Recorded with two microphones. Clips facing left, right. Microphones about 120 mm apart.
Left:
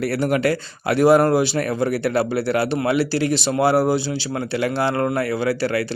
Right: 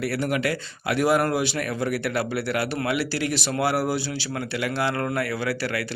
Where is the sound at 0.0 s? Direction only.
40° left (ahead or behind).